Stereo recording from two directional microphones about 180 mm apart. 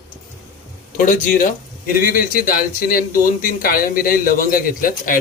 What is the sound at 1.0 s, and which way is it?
Speech, 50° left (ahead or behind).